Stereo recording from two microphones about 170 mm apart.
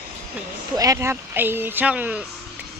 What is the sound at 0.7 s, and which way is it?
Speech, 20° right (ahead or behind).